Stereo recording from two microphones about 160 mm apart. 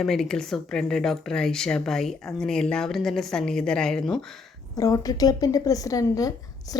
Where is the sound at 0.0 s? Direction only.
Centre (ahead or behind).